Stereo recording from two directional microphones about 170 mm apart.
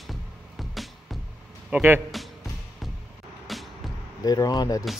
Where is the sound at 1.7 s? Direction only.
10° right (ahead or behind).